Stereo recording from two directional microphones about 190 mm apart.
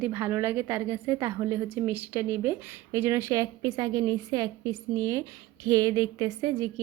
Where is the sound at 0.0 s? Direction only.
10° right (ahead or behind).